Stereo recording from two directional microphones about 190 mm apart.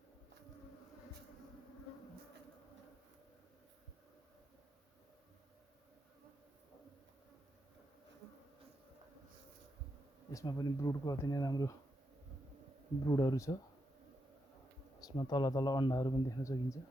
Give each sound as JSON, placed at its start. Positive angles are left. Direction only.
{"t": 10.3, "sound": "a man's voice", "side_deg": 20}
{"t": 13.1, "sound": "a man's voice", "side_deg": 20}
{"t": 15.0, "sound": "a man's voice", "side_deg": 25}